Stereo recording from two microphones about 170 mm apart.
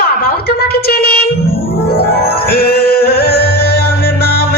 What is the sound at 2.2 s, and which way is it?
Music, 65° left (ahead or behind).